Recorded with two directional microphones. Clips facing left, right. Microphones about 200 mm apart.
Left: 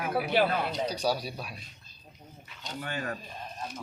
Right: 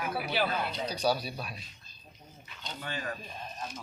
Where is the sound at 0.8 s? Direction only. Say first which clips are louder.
Even; 15° left (ahead or behind).